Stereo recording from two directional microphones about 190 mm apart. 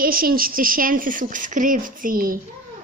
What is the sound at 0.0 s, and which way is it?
Speech, 50° right (ahead or behind).